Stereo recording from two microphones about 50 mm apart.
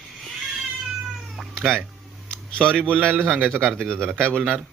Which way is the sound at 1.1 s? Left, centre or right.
Centre.